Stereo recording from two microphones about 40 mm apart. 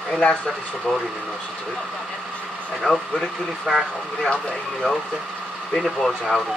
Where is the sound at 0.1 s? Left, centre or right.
Left.